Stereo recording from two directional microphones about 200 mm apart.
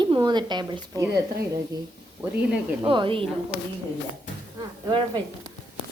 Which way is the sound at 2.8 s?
25° right (ahead or behind).